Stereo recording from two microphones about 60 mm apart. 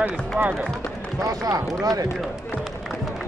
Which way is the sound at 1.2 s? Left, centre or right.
Right.